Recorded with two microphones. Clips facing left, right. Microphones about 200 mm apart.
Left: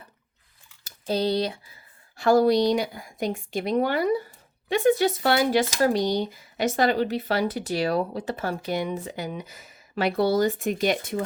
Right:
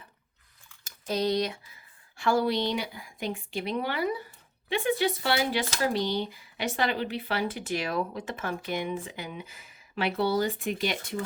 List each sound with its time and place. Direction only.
0.9 s typing: 30° left (ahead or behind)
2.1 s a woman's voice: 40° left (ahead or behind)